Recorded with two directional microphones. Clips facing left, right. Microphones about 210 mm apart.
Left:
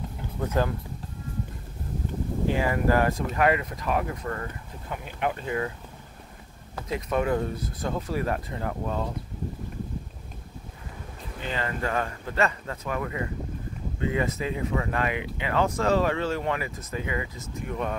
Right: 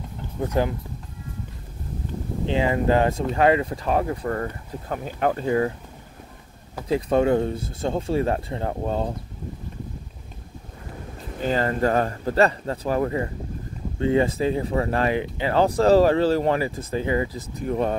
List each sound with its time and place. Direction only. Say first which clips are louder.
0.5 s speech: right 3 dB; 15° right (ahead or behind)
2.4 s speech: right 3 dB; 20° right (ahead or behind)
6.9 s speech: right 6 dB; 30° right (ahead or behind)
11.4 s speech: right 9 dB; 40° right (ahead or behind)